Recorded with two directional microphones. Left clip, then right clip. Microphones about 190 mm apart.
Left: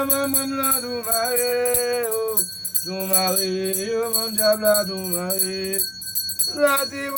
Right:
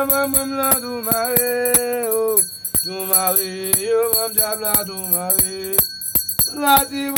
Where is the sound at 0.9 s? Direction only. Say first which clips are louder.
Right 2 dB; 40° right (ahead or behind).